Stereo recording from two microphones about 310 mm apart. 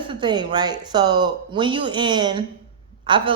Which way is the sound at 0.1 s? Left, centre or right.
Centre.